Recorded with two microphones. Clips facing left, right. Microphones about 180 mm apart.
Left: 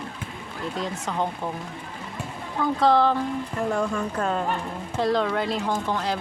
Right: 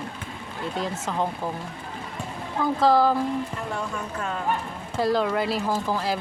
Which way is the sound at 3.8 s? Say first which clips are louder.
Left 5 dB; 35° left (ahead or behind).